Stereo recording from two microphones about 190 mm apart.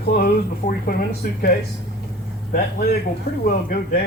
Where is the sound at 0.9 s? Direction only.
55° left (ahead or behind).